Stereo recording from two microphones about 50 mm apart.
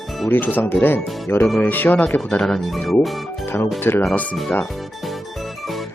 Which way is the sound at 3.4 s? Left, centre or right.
Left.